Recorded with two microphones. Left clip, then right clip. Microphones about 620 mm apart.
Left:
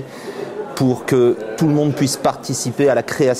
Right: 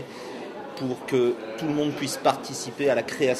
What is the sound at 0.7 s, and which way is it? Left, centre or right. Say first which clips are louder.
Mantra: left 9 dB; left.